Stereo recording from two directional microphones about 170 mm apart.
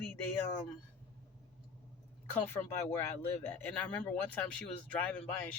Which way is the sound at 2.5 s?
15° left (ahead or behind).